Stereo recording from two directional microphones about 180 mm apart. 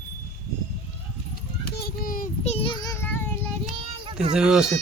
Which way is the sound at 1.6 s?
60° left (ahead or behind).